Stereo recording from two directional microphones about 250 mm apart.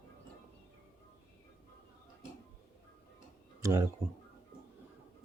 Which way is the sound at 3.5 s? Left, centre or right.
Centre.